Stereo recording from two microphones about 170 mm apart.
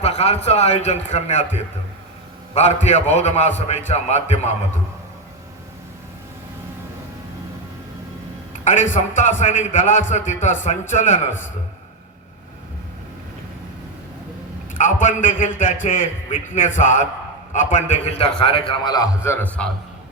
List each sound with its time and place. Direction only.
0.0 s a man's voice: 40° left (ahead or behind)
8.6 s a man's voice: 45° left (ahead or behind)
14.7 s a man's voice: 50° left (ahead or behind); by 19.0 s 25° left (ahead or behind)
19.2 s a man's voice: 10° left (ahead or behind)